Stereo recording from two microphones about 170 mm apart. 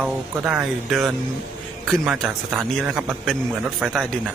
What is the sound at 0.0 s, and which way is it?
A man's voice, 5° right (ahead or behind).